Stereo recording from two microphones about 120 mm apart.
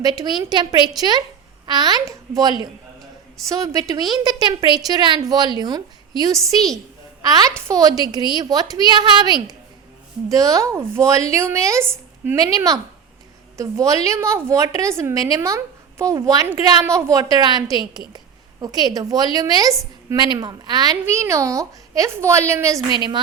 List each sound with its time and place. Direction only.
0.0 s a woman's voice: 35° right (ahead or behind); by 12.4 s 20° right (ahead or behind)
12.4 s a woman's voice: 30° right (ahead or behind)
16.8 s a woman's voice: 20° right (ahead or behind)
23.0 s a woman's voice: 40° right (ahead or behind)